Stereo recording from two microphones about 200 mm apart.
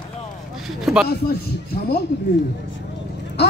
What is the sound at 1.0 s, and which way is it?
Speech, 55° left (ahead or behind).